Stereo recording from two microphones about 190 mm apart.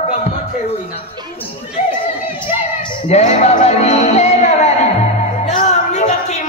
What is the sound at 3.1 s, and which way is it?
Music, 40° left (ahead or behind).